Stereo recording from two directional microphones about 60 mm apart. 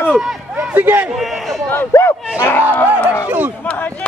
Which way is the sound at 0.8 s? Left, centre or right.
Right.